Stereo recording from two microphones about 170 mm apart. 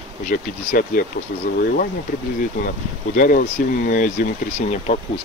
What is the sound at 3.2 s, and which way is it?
Speech, 55° left (ahead or behind).